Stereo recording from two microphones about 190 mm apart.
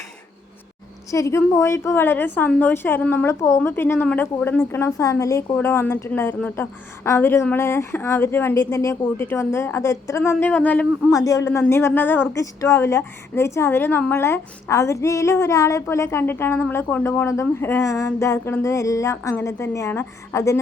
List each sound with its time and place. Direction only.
1.1 s a woman's voice: 15° left (ahead or behind)